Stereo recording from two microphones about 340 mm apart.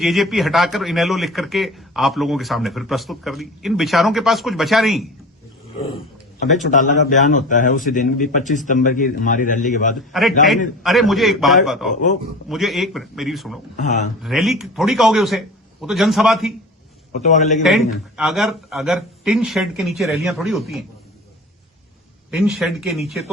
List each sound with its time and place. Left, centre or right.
0.0 s a man's voice: centre
6.4 s a man's voice: left
10.1 s a man's voice: centre
17.1 s a man's voice: centre
18.2 s a man's voice: centre
22.3 s a man's voice: centre